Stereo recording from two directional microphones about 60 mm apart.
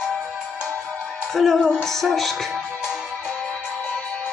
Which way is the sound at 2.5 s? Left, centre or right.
Centre.